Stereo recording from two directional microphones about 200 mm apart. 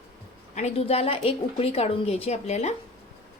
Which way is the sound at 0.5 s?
30° left (ahead or behind).